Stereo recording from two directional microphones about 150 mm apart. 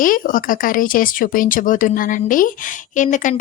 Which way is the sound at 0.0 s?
65° left (ahead or behind).